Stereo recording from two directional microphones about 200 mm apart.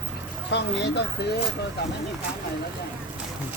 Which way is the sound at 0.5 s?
60° left (ahead or behind).